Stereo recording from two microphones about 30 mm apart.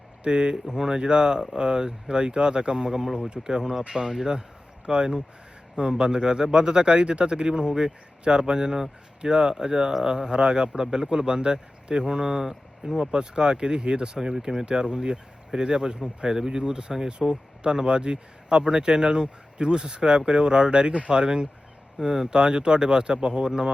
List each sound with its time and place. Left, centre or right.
0.3 s speech: right
2.9 s speech: centre
3.2 s speech: right
3.4 s speech: centre
3.8 s speech: right; by 13.0 s centre
13.1 s speech: right
22.3 s speech: right